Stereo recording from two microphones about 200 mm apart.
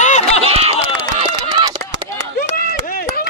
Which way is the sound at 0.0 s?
35° left (ahead or behind).